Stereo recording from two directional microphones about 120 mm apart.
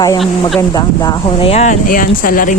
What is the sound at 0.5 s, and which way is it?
Speech, 30° left (ahead or behind).